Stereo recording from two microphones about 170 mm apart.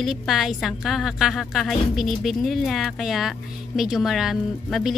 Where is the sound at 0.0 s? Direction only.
Centre (ahead or behind).